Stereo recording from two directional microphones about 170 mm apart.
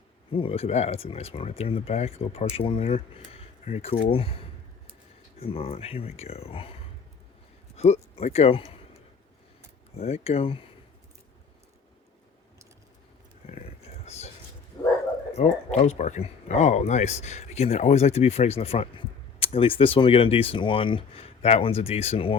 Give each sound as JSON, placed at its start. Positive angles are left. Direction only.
{"t": 0.3, "sound": "speech", "side_deg": 30}
{"t": 7.8, "sound": "speech", "side_deg": 40}
{"t": 13.5, "sound": "a sound", "side_deg": 40}
{"t": 14.8, "sound": "bow-wow", "side_deg": 20}
{"t": 15.4, "sound": "speech", "side_deg": 40}